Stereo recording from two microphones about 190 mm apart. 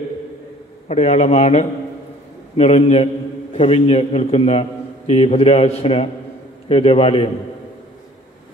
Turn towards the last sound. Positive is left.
turn(degrees=30)  # may be behind; listen again after turning